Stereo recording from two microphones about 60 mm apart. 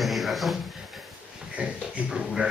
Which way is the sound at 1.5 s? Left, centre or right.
Centre.